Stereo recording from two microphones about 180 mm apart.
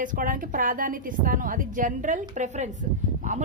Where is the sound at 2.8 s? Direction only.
45° right (ahead or behind).